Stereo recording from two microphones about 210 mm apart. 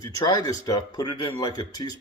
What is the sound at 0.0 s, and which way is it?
Speech, 15° left (ahead or behind).